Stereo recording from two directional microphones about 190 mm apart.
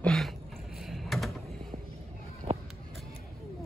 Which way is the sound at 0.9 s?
Centre (ahead or behind).